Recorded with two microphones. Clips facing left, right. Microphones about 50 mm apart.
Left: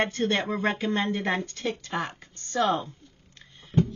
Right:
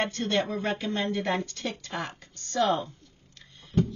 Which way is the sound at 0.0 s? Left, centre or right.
Left.